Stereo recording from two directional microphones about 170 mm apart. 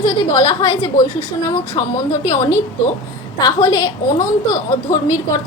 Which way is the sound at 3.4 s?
20° left (ahead or behind).